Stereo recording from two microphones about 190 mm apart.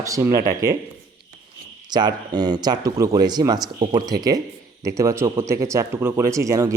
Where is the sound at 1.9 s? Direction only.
20° right (ahead or behind).